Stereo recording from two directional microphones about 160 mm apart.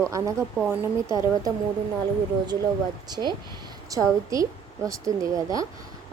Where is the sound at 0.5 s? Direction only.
10° right (ahead or behind).